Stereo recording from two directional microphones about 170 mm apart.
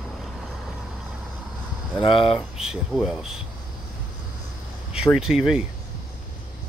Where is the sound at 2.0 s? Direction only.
30° left (ahead or behind).